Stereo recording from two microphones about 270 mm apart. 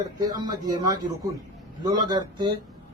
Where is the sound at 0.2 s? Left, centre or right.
Centre.